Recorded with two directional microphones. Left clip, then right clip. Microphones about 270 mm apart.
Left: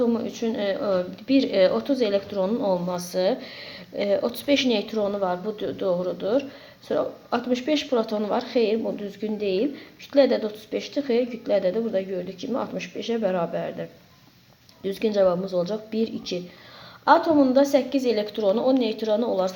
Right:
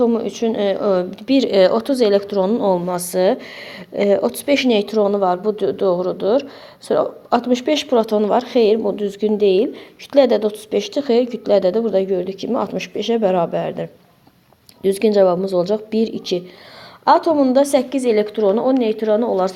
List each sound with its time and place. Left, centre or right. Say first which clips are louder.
0.0 s a woman's voice: right 7 dB; right